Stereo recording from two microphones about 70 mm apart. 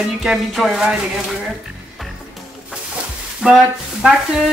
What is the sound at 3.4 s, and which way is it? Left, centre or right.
Speech, centre.